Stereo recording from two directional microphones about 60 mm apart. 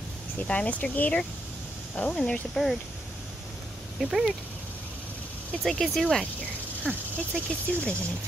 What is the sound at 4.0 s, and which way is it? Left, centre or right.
Speech, centre.